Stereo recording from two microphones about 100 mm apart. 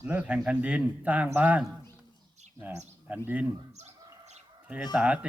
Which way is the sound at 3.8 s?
90° right.